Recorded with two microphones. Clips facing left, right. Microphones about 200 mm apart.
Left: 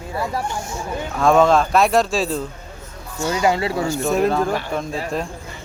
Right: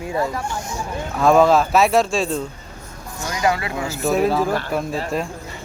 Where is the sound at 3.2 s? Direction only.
25° left (ahead or behind).